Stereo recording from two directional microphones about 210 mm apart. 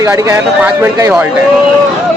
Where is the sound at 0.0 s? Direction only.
15° right (ahead or behind).